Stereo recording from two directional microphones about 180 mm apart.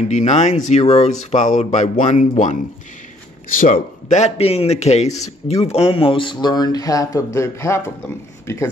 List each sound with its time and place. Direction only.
0.1 s a man's voice: 40° left (ahead or behind)
3.5 s a man's voice: 45° left (ahead or behind); by 8.6 s 15° left (ahead or behind)